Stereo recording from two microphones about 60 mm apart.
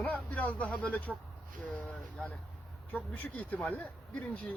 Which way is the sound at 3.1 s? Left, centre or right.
Left.